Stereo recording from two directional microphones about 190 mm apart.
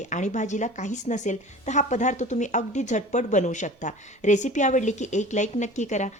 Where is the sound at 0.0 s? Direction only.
40° left (ahead or behind).